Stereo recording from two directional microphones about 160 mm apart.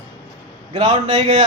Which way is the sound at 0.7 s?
40° right (ahead or behind).